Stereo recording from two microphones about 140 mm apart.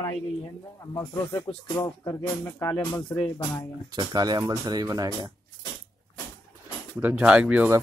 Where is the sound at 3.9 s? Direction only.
30° right (ahead or behind).